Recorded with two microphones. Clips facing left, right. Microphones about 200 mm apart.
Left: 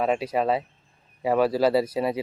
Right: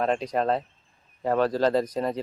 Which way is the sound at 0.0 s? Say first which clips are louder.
Left 1 dB; 5° left (ahead or behind).